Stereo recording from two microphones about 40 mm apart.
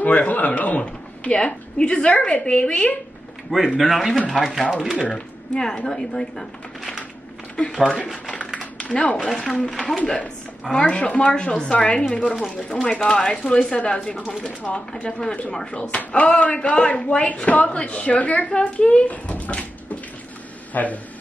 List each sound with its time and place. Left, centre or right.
0.0 s a sound: left
1.3 s a man's voice: left
3.5 s a man's voice: centre
5.1 s speech: centre
7.7 s speech: centre
8.9 s a man's voice: left
9.2 s speech: centre
9.9 s a man's voice: left
18.5 s speech: left
20.7 s a man's voice: left